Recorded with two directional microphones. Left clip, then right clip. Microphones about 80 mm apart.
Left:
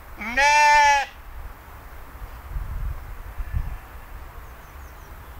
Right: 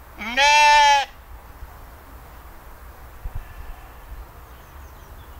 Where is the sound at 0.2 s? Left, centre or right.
Right.